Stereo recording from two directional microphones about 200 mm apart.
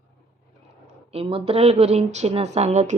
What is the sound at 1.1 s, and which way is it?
A woman's voice, 30° right (ahead or behind).